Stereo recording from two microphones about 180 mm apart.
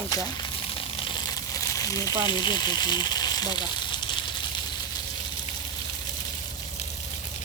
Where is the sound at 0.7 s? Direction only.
25° left (ahead or behind).